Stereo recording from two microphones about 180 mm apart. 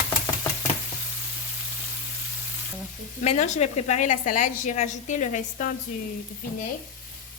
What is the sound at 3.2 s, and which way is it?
A woman's voice, 40° left (ahead or behind).